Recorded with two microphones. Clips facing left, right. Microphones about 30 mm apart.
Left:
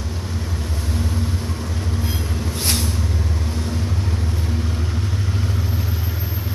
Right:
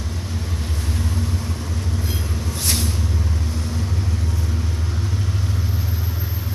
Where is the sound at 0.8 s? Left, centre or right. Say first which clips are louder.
Left 2 dB; centre.